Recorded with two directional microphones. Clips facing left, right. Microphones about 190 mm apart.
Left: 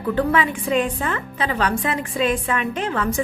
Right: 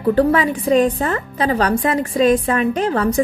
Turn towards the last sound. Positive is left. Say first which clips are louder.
# right 6 dB
turn(degrees=-40)  # may be behind; listen again after turning